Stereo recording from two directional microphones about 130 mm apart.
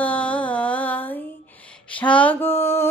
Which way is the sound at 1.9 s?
10° left (ahead or behind).